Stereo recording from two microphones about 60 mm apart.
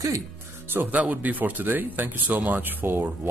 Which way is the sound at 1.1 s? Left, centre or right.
Right.